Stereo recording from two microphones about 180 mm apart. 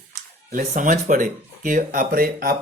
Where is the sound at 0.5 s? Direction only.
45° right (ahead or behind).